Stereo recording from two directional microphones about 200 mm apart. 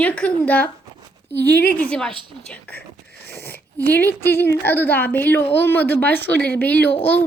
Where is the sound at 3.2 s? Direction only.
55° left (ahead or behind).